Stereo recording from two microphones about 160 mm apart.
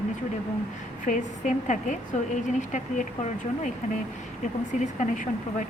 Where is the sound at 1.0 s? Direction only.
50° left (ahead or behind).